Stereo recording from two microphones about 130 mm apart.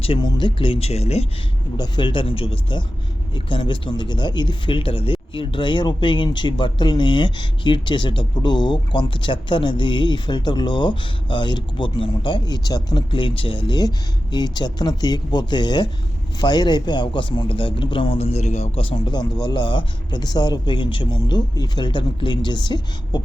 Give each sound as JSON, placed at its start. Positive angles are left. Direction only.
{"t": 0.0, "sound": "speech", "side_deg": 40}
{"t": 1.7, "sound": "speech", "side_deg": 35}
{"t": 18.9, "sound": "speech", "side_deg": 30}